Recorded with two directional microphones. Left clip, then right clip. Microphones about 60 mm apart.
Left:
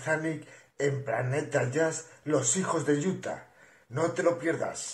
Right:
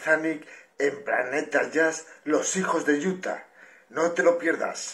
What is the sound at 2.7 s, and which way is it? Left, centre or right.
A man's voice, centre.